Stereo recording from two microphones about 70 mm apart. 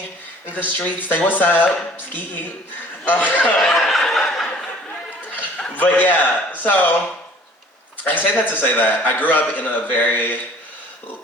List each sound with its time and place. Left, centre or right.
0.5 s a man's voice: left
3.6 s snicker: centre
5.3 s a sound: left
5.7 s a man's voice: left
8.0 s a man's voice: left